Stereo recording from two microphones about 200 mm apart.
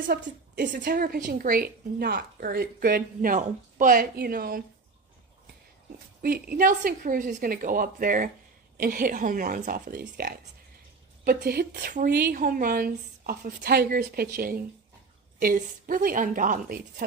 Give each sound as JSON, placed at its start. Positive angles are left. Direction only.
{"t": 0.0, "sound": "a woman's voice", "side_deg": -45}
{"t": 6.2, "sound": "a woman's voice", "side_deg": -50}